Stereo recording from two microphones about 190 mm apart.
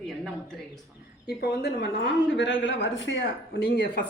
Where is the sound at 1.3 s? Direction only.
55° left (ahead or behind).